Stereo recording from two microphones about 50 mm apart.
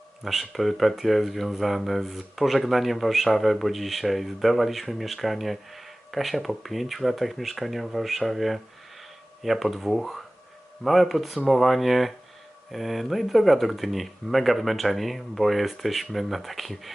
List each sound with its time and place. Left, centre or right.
0.3 s speech: centre